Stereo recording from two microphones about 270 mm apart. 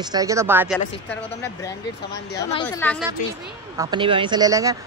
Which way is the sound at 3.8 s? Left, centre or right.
Centre.